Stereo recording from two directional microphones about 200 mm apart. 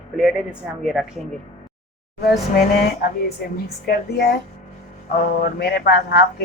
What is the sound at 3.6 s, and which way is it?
Speech, 50° left (ahead or behind).